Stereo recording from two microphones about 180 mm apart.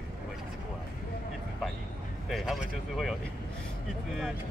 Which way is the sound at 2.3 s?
Centre (ahead or behind).